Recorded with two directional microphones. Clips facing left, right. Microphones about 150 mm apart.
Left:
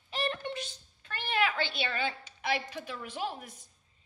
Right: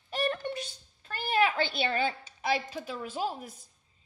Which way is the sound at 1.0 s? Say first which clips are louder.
Right 4 dB; 35° right (ahead or behind).